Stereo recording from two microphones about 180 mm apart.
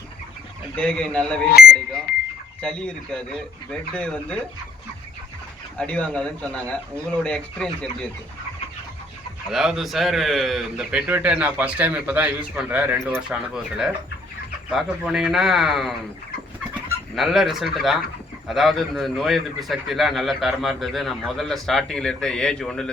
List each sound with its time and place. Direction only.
0.8 s a man's voice: 5° left (ahead or behind)
1.6 s speech: 55° left (ahead or behind)
2.1 s a sound: 55° left (ahead or behind)
2.6 s a man's voice: 5° left (ahead or behind)
5.7 s speech: 5° left (ahead or behind)
9.5 s a man's voice: centre (ahead or behind)
17.2 s a man's voice: centre (ahead or behind)